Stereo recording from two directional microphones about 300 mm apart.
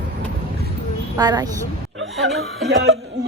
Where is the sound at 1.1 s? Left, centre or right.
Centre.